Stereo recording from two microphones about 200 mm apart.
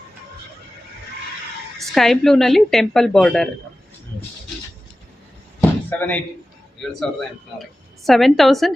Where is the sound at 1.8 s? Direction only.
Centre (ahead or behind).